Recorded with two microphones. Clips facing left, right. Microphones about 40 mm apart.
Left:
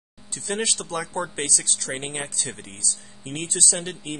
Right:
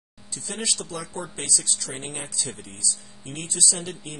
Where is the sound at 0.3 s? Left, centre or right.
Left.